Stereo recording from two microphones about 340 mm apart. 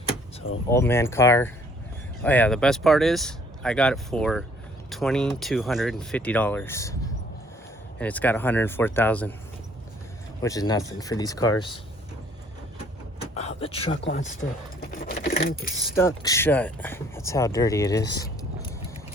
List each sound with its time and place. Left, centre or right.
0.7 s speech: centre
7.9 s speech: centre
10.4 s speech: centre
13.3 s a sound: centre
13.9 s speech: left
14.8 s keys jangling: left
15.8 s speech: centre
18.1 s keys jangling: centre